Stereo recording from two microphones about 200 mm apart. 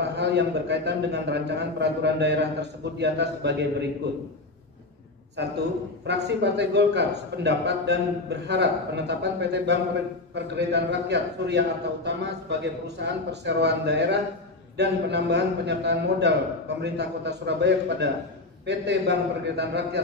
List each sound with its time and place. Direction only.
0.0 s a man's voice: 60° right (ahead or behind)
5.4 s a man's voice: 60° right (ahead or behind)